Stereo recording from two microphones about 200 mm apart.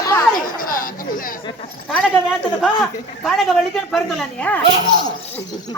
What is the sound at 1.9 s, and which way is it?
Speech, centre (ahead or behind).